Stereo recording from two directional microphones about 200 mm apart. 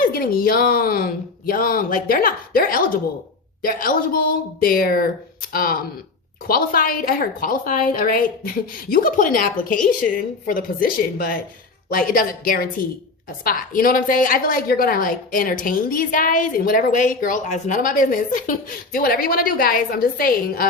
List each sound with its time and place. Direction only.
0.1 s a woman's voice: 45° left (ahead or behind)